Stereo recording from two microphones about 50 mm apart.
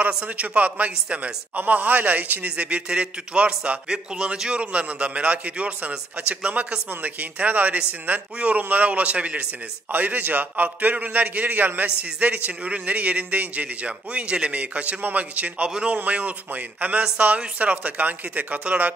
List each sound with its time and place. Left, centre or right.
0.4 s a man's voice: right